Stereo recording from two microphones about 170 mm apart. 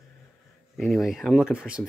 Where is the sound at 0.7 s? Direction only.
Centre (ahead or behind).